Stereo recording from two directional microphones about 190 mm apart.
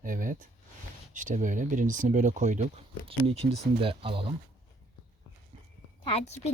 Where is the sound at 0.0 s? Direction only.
45° right (ahead or behind).